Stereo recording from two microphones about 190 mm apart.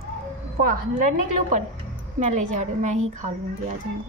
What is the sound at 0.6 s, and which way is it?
Speech, 50° right (ahead or behind).